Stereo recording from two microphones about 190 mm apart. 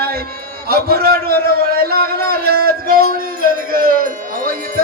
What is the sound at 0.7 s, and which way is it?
A man's voice, 55° right (ahead or behind).